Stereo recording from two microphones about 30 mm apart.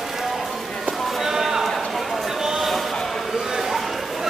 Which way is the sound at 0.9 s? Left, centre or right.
Centre.